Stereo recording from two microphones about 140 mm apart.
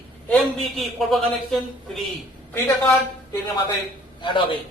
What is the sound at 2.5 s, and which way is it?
Speech, 15° left (ahead or behind).